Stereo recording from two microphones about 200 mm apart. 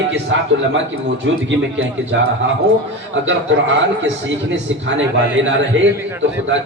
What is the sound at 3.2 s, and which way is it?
Speech, 65° right (ahead or behind).